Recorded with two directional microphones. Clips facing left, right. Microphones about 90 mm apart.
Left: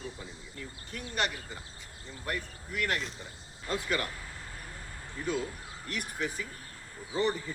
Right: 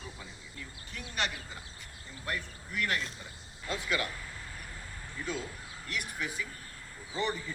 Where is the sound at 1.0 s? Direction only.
40° left (ahead or behind).